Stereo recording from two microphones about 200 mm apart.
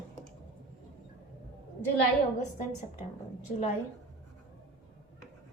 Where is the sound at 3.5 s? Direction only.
35° left (ahead or behind).